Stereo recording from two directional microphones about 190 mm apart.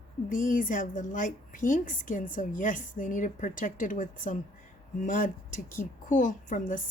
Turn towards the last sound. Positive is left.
turn(degrees=45)  # may be behind; listen again after turning